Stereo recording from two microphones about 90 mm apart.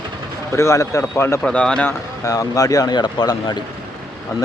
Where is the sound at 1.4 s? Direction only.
10° left (ahead or behind).